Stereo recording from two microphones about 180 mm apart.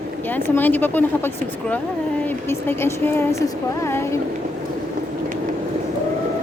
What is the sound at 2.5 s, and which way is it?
Speech, 15° left (ahead or behind).